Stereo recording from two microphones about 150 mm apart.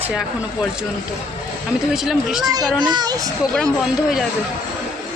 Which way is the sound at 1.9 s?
5° right (ahead or behind).